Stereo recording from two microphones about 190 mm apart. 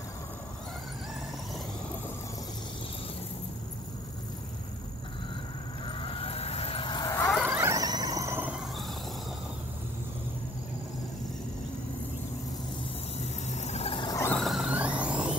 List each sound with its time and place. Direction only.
5.9 s vehicle: 30° left (ahead or behind)
7.4 s squeal: 15° right (ahead or behind)
13.2 s a sound: 35° left (ahead or behind); by 14.3 s 20° left (ahead or behind)
14.3 s music: centre (ahead or behind)